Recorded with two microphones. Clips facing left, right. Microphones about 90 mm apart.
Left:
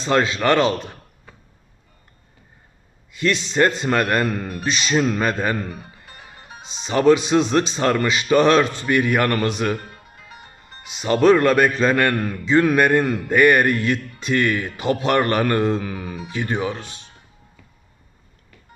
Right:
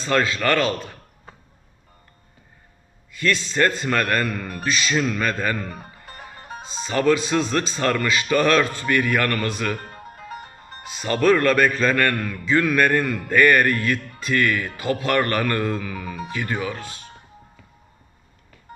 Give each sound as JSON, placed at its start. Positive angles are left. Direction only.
{"t": 0.0, "sound": "speech", "side_deg": 20}
{"t": 3.1, "sound": "speech", "side_deg": 20}
{"t": 5.7, "sound": "music", "side_deg": -45}
{"t": 6.8, "sound": "speech", "side_deg": 20}
{"t": 9.7, "sound": "music", "side_deg": -40}
{"t": 10.8, "sound": "speech", "side_deg": 20}